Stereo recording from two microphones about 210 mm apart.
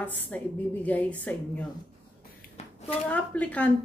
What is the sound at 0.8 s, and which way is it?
Speech, 5° left (ahead or behind).